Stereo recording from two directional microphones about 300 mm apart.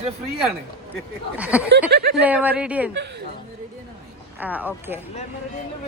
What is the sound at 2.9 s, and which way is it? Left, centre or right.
Speech, right.